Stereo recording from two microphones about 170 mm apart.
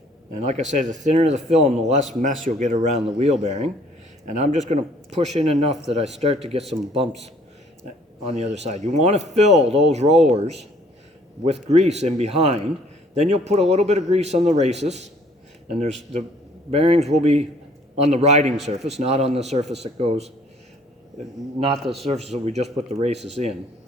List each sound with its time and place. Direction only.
0.3 s a man's voice: 40° right (ahead or behind)
8.2 s a man's voice: 40° right (ahead or behind)
21.6 s a man's voice: 35° right (ahead or behind)